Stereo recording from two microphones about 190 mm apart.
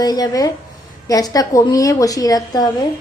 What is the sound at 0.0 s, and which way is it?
A woman's voice, 20° left (ahead or behind).